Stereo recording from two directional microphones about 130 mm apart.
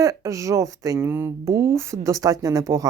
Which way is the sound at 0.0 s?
25° right (ahead or behind).